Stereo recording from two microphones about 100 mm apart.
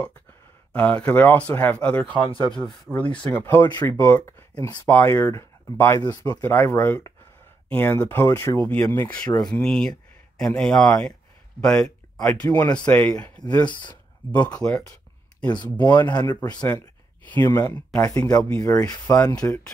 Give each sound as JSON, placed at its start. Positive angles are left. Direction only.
{"t": 0.7, "sound": "speech", "side_deg": 15}
{"t": 2.1, "sound": "speech", "side_deg": -45}
{"t": 2.9, "sound": "speech", "side_deg": 15}
{"t": 5.9, "sound": "speech", "side_deg": 40}
{"t": 6.4, "sound": "speech", "side_deg": 25}
{"t": 9.4, "sound": "speech", "side_deg": 5}
{"t": 12.4, "sound": "speech", "side_deg": 40}
{"t": 12.8, "sound": "speech", "side_deg": 15}
{"t": 13.7, "sound": "speech", "side_deg": 50}
{"t": 14.4, "sound": "speech", "side_deg": 10}
{"t": 15.4, "sound": "speech", "side_deg": 50}
{"t": 17.5, "sound": "speech", "side_deg": 25}
{"t": 18.3, "sound": "speech", "side_deg": 10}
{"t": 18.6, "sound": "speech", "side_deg": 35}